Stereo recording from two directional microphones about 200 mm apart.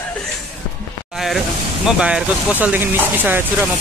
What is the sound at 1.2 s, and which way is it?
Speech, centre (ahead or behind).